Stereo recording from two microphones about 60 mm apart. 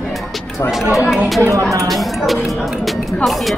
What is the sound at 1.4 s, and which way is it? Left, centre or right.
Speech, right.